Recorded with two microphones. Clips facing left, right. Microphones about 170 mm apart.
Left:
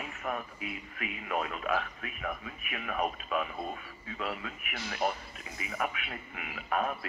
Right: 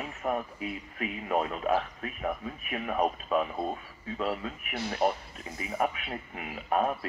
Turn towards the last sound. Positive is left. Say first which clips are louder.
# right 4 dB
turn(degrees=-35)  # may be behind; listen again after turning